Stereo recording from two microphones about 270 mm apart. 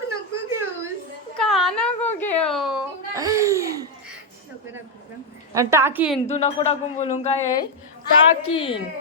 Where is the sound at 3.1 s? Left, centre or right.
Centre.